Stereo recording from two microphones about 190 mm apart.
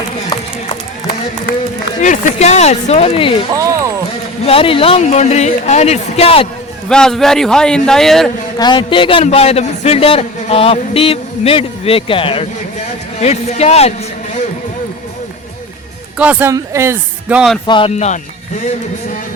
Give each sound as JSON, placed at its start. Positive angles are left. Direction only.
{"t": 2.0, "sound": "speech", "side_deg": 40}
{"t": 3.5, "sound": "speech", "side_deg": -15}
{"t": 4.4, "sound": "speech", "side_deg": 30}
{"t": 6.8, "sound": "a man's voice", "side_deg": 5}
{"t": 8.5, "sound": "speech", "side_deg": 25}
{"t": 16.1, "sound": "speech", "side_deg": -10}
{"t": 17.7, "sound": "speech", "side_deg": 25}